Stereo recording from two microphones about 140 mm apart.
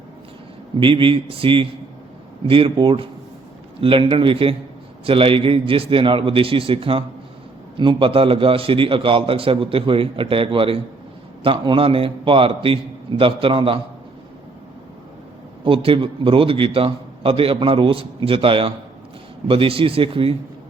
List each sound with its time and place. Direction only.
0.8 s a man's voice: 40° right (ahead or behind)
15.6 s a man's voice: 40° right (ahead or behind)